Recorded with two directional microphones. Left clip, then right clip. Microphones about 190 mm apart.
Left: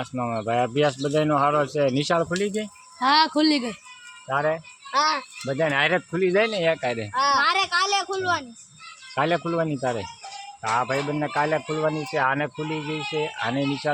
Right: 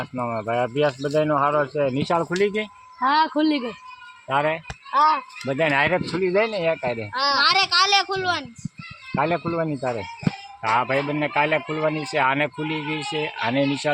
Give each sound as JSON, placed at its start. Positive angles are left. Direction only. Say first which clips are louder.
{"t": 0.0, "sound": "speech", "louder": "right 1 dB", "side_deg": 15}
{"t": 2.3, "sound": "speech", "louder": "right 4 dB", "side_deg": -30}
{"t": 3.0, "sound": "speech", "louder": "even", "side_deg": 35}
{"t": 4.3, "sound": "speech", "louder": "right 2 dB", "side_deg": -25}
{"t": 4.9, "sound": "speech", "louder": "right 4 dB", "side_deg": 20}
{"t": 5.5, "sound": "speech", "louder": "right 2 dB", "side_deg": -25}
{"t": 6.1, "sound": "speech", "louder": "even", "side_deg": 15}
{"t": 10.7, "sound": "speech", "louder": "right 3 dB", "side_deg": -30}